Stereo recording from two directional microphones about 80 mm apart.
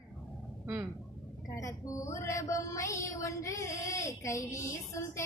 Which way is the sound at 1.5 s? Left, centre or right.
Left.